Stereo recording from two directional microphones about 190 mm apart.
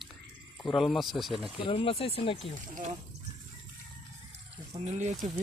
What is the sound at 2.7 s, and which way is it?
Speech, 45° right (ahead or behind).